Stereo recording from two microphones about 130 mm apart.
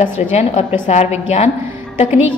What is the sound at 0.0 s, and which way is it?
A woman's voice, 55° left (ahead or behind).